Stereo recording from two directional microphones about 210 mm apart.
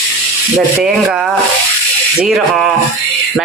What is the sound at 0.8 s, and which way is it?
A man's voice, 5° right (ahead or behind).